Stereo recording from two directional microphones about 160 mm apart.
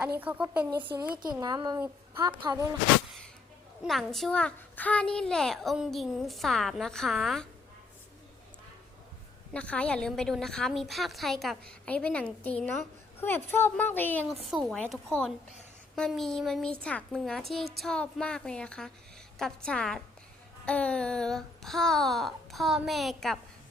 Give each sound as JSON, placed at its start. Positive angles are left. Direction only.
{"t": 0.2, "sound": "a woman's voice", "side_deg": -10}
{"t": 1.2, "sound": "a woman's voice", "side_deg": -25}
{"t": 3.8, "sound": "a child's voice", "side_deg": 0}
{"t": 9.5, "sound": "a child's voice", "side_deg": 10}